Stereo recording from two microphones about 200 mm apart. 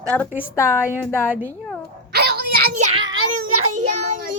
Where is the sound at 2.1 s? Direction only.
50° right (ahead or behind).